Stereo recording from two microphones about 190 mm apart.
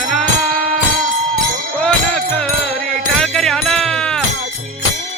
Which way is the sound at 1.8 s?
5° left (ahead or behind).